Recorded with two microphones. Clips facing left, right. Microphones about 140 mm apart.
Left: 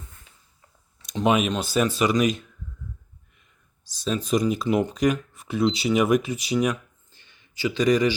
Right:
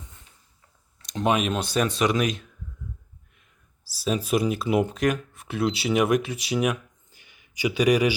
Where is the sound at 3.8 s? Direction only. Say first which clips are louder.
Even; 5° right (ahead or behind).